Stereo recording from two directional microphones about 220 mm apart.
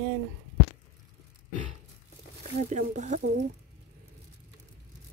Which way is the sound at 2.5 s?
30° right (ahead or behind).